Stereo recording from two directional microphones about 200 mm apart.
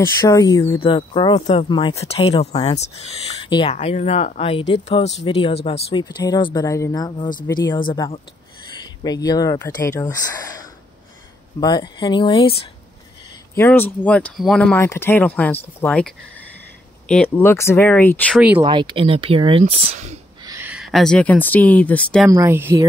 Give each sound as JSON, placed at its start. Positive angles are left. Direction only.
{"t": 0.0, "sound": "speech", "side_deg": 15}
{"t": 13.6, "sound": "speech", "side_deg": 10}
{"t": 18.6, "sound": "speech", "side_deg": -25}
{"t": 20.5, "sound": "speech", "side_deg": -5}
{"t": 22.3, "sound": "speech", "side_deg": -15}